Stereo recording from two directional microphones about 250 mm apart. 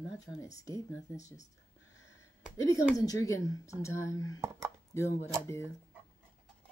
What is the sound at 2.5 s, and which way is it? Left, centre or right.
Speech, centre.